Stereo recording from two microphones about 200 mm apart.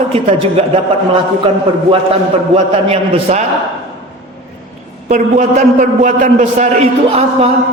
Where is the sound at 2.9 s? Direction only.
30° right (ahead or behind).